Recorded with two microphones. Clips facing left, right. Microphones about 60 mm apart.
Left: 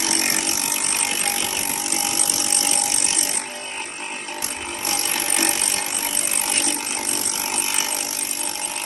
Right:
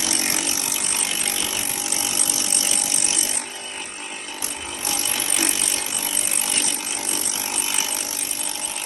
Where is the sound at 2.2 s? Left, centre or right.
Left.